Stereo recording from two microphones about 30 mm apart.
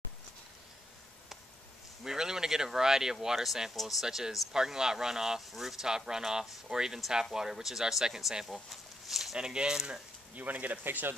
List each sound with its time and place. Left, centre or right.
2.0 s speech: centre
5.9 s speech: right
8.6 s a sound: centre
9.4 s speech: right
10.3 s speech: right